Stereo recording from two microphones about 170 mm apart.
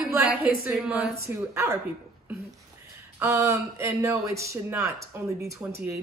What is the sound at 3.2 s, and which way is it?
Speech, 15° right (ahead or behind).